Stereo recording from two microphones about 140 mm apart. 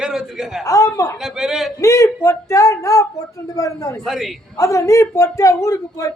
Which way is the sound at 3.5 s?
25° left (ahead or behind).